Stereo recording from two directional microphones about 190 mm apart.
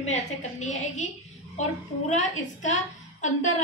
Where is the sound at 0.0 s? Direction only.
35° left (ahead or behind).